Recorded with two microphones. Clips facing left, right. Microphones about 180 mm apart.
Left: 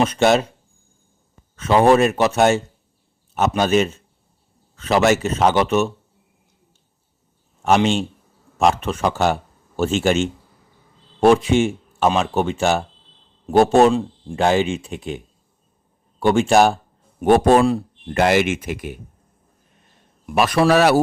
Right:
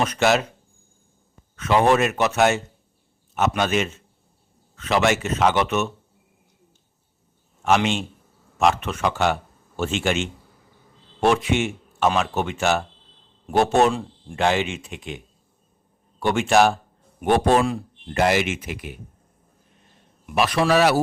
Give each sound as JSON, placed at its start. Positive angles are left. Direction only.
{"t": 0.0, "sound": "speech", "side_deg": 30}
{"t": 1.5, "sound": "speech", "side_deg": 30}
{"t": 7.6, "sound": "a man's voice", "side_deg": 35}
{"t": 16.2, "sound": "speech", "side_deg": 35}
{"t": 17.2, "sound": "speech", "side_deg": 45}
{"t": 20.2, "sound": "speech", "side_deg": 45}